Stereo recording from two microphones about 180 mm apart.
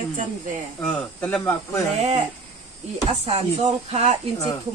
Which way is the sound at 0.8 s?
5° left (ahead or behind).